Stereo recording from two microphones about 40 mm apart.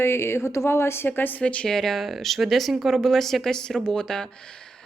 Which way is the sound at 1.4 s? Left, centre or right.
Left.